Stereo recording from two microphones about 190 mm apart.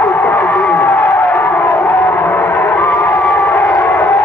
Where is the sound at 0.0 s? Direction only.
10° left (ahead or behind).